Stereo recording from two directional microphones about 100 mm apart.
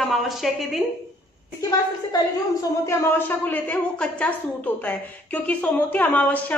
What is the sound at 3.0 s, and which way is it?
A woman's voice, 20° left (ahead or behind).